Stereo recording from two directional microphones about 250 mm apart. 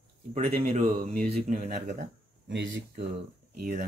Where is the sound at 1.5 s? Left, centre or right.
Right.